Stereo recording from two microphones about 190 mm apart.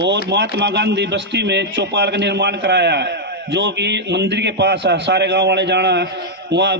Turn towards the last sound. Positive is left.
turn(degrees=-65)  # may be behind; listen again after turning